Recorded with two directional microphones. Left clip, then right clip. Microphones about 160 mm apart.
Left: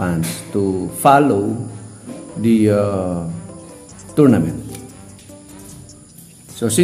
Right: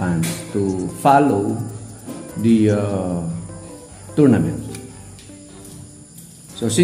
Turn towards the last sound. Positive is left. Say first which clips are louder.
# left 3 dB
turn(degrees=45)  # may be behind; listen again after turning